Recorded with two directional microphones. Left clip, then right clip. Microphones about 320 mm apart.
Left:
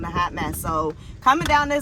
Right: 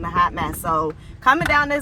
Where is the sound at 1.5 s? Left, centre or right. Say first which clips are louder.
Right 1 dB; right.